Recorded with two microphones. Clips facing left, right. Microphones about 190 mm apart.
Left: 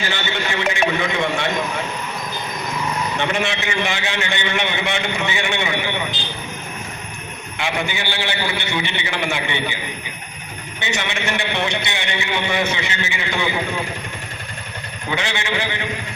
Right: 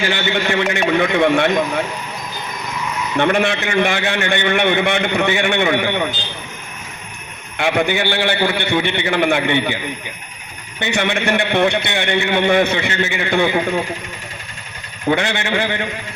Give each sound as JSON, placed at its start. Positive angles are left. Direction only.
{"t": 0.1, "sound": "a man's voice", "side_deg": -55}
{"t": 3.2, "sound": "a man's voice", "side_deg": -55}
{"t": 7.6, "sound": "a man's voice", "side_deg": -55}
{"t": 10.8, "sound": "a man's voice", "side_deg": -55}
{"t": 15.1, "sound": "a man's voice", "side_deg": -55}